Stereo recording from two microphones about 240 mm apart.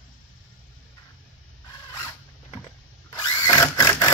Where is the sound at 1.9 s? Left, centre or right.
Centre.